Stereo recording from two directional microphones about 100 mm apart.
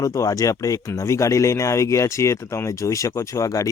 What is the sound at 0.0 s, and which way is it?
Speech, 35° left (ahead or behind).